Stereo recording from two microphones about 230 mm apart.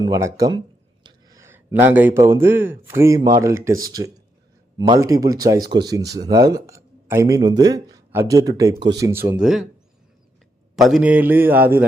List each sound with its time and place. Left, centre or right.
0.0 s speech: centre
9.4 s speech: centre
10.8 s speech: centre